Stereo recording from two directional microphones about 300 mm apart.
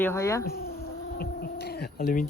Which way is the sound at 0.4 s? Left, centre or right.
Left.